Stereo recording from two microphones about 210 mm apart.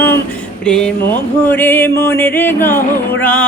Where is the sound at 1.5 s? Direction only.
10° left (ahead or behind).